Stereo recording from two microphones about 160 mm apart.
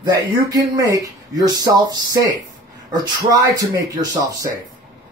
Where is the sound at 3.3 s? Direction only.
25° right (ahead or behind).